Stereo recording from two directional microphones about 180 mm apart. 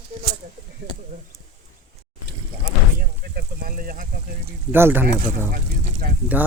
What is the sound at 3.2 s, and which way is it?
Speech, 55° right (ahead or behind).